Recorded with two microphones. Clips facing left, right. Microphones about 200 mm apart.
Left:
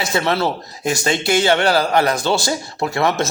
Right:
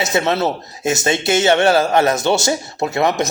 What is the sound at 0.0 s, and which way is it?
Speech, 20° right (ahead or behind).